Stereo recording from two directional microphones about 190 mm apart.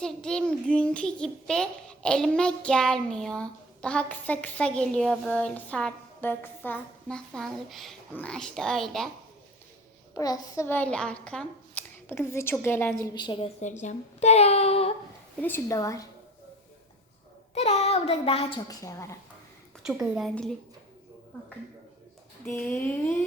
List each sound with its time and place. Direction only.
0.0 s a child's voice: 5° left (ahead or behind)
10.2 s a child's voice: 20° left (ahead or behind)
13.1 s a woman's voice: 25° left (ahead or behind)
13.6 s a woman's voice: 40° left (ahead or behind)
15.4 s a child's voice: 10° left (ahead or behind)
17.5 s a woman's voice: 35° left (ahead or behind)
18.7 s a child's voice: 15° left (ahead or behind)
19.8 s a child's voice: centre (ahead or behind)
22.4 s a child's voice: 10° left (ahead or behind)